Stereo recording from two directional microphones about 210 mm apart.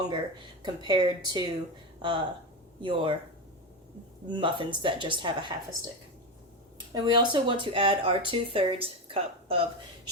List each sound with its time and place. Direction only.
0.6 s speech: 20° right (ahead or behind)
4.3 s speech: 25° right (ahead or behind)
6.9 s a woman's voice: 20° right (ahead or behind)